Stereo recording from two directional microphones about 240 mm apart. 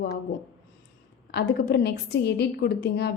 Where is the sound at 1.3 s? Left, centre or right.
Left.